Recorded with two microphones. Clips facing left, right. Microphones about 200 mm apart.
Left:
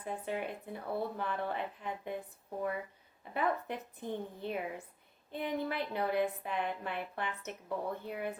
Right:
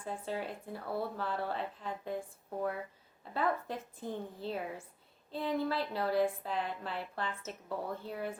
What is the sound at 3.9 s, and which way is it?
A woman's voice, 20° left (ahead or behind).